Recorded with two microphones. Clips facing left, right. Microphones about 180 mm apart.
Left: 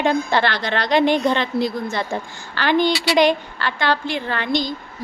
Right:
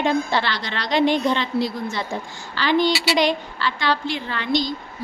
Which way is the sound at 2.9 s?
5° right (ahead or behind).